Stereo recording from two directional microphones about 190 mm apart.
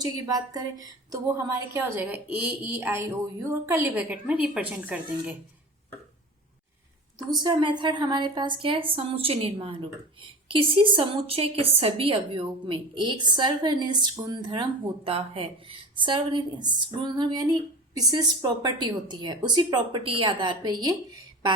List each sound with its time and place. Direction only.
0.0 s a woman's voice: 20° right (ahead or behind)
7.3 s a woman's voice: 25° right (ahead or behind)